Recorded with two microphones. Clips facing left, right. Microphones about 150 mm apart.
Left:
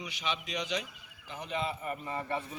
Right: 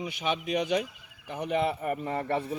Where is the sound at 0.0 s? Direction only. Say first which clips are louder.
Right 6 dB; 50° right (ahead or behind).